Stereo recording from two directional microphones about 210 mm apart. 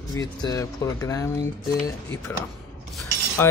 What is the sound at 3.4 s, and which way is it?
Speech, 10° left (ahead or behind).